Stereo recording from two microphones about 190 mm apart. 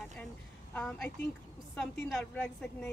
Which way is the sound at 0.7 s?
10° left (ahead or behind).